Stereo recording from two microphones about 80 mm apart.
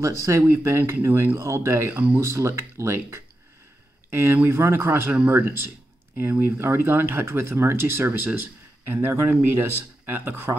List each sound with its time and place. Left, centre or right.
0.0 s speech: right
1.9 s speech: right
2.1 s speech: right
5.1 s speech: centre